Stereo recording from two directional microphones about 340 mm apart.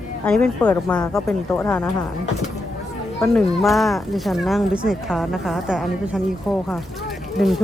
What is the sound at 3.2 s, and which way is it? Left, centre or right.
Speech, centre.